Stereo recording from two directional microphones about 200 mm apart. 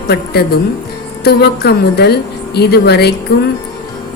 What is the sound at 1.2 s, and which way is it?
Speech, 55° left (ahead or behind).